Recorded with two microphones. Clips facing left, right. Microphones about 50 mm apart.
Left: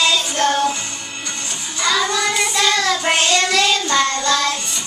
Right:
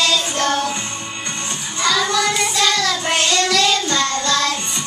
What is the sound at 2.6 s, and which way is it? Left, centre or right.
Child singing, left.